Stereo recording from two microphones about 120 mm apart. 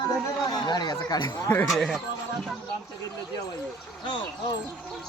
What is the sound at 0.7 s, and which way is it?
Speech, 35° left (ahead or behind).